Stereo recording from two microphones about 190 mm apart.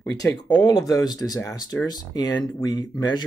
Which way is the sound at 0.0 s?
20° left (ahead or behind).